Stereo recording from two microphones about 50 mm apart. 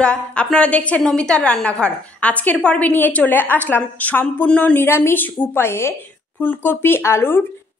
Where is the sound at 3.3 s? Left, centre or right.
Left.